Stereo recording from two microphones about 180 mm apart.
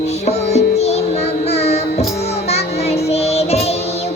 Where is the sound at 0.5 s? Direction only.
35° left (ahead or behind).